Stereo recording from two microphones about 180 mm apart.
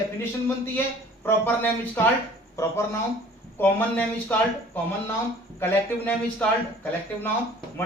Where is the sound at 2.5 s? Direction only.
15° left (ahead or behind).